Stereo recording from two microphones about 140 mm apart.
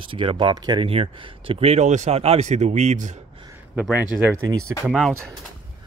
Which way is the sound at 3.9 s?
10° right (ahead or behind).